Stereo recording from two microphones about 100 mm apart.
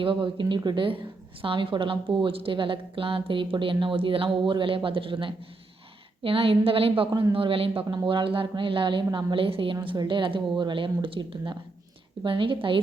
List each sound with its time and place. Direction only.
0.0 s a woman's voice: 55° right (ahead or behind)
1.4 s a woman's voice: 65° right (ahead or behind)